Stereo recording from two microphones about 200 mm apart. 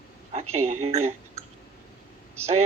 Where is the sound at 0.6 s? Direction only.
90° right.